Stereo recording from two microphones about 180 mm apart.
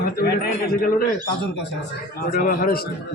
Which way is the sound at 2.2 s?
50° left (ahead or behind).